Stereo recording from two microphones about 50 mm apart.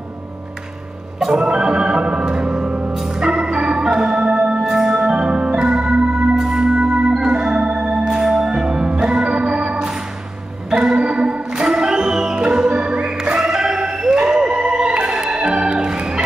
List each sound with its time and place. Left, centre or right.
1.2 s organ: centre